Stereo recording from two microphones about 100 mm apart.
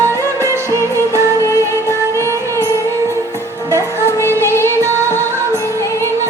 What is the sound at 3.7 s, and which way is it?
Music, 30° right (ahead or behind).